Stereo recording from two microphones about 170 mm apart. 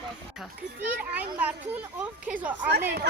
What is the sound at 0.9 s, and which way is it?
Speech, 10° right (ahead or behind).